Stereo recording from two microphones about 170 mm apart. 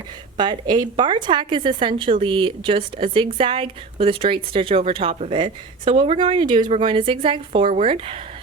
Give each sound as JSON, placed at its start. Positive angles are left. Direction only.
{"t": 0.3, "sound": "a woman's voice", "side_deg": -25}